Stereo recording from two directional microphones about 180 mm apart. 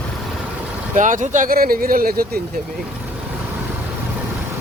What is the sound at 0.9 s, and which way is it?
Speech, 45° right (ahead or behind).